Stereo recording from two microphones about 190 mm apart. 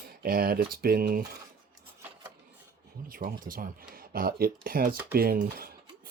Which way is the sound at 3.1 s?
50° right (ahead or behind).